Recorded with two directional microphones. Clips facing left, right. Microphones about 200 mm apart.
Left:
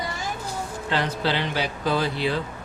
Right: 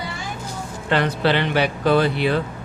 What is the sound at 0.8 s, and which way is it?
Speech, 60° right (ahead or behind).